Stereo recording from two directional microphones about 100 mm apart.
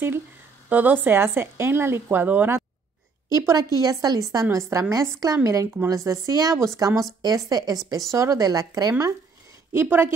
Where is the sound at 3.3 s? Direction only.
35° right (ahead or behind).